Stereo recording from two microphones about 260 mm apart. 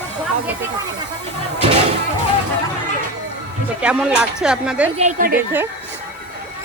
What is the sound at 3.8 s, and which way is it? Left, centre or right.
Speech, centre.